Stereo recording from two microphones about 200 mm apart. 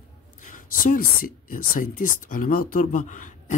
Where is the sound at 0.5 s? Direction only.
45° left (ahead or behind).